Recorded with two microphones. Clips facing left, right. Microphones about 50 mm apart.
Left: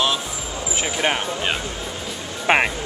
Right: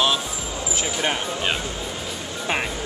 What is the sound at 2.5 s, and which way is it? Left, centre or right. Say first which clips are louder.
Speech: left 8 dB; left.